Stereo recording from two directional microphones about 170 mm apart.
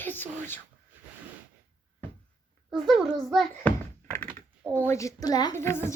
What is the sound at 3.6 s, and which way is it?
Speech, 10° left (ahead or behind).